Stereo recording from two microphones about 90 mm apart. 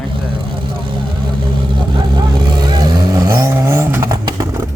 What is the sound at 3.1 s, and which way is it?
Vehicle, 40° right (ahead or behind).